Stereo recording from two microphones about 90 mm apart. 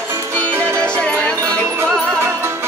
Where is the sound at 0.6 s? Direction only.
30° right (ahead or behind).